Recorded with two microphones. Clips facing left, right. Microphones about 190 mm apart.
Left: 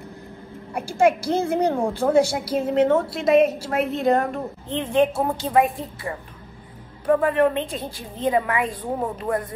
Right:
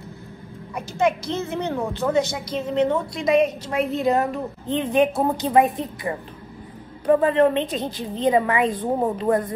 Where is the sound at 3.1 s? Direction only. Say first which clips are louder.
Left 2 dB; 5° left (ahead or behind).